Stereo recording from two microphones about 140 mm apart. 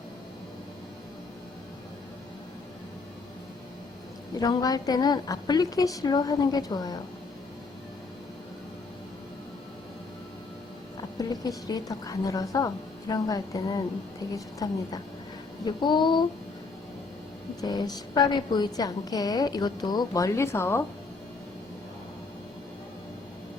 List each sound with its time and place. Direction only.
4.4 s a woman's voice: 25° left (ahead or behind)
11.2 s a woman's voice: 25° left (ahead or behind)
15.6 s a sound: 35° left (ahead or behind)
17.6 s a woman's voice: 30° left (ahead or behind)